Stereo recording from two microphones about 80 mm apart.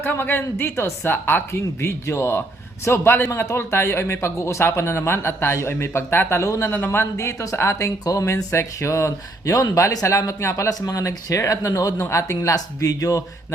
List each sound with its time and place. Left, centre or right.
0.0 s speech: left
6.7 s speech: left
11.9 s speech: left